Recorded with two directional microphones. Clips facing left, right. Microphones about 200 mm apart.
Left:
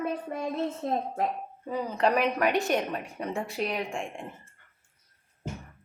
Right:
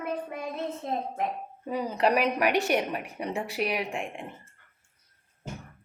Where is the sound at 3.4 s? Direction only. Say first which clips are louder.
Right 1 dB; 65° right (ahead or behind).